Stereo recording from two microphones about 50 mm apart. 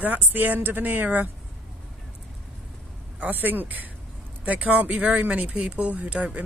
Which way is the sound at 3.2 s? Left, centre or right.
Right.